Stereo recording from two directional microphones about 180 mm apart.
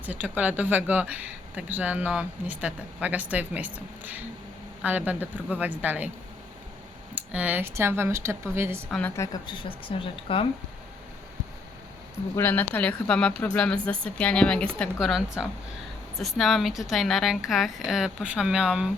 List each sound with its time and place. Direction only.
0.0 s speech: 10° right (ahead or behind)
7.2 s speech: 10° right (ahead or behind)
8.9 s speech: 10° left (ahead or behind); by 10.4 s 30° left (ahead or behind)
12.4 s a woman's voice: 10° left (ahead or behind)